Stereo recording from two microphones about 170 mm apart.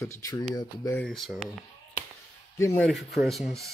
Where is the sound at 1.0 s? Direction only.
Centre (ahead or behind).